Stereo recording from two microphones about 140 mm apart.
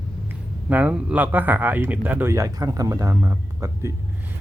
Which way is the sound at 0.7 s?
10° right (ahead or behind).